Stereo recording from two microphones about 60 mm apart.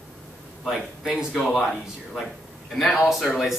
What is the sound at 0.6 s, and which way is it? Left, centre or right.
Speech, centre.